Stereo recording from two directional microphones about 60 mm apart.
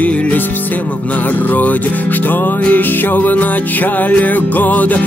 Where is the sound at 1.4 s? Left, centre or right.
Left.